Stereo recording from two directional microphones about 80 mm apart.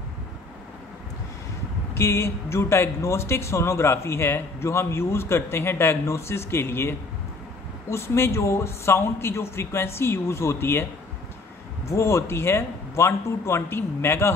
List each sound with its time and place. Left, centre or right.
2.0 s speech: left
11.9 s speech: left